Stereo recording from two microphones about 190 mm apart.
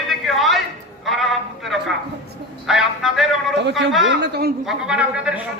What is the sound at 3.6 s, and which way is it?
Speech, 70° right (ahead or behind).